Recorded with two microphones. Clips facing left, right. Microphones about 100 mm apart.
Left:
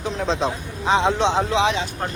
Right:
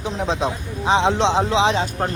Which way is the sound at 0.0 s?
15° right (ahead or behind).